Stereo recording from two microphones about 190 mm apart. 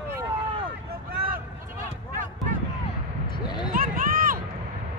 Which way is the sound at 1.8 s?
45° right (ahead or behind).